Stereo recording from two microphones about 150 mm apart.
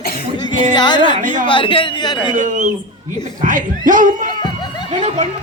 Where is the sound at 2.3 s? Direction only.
55° right (ahead or behind).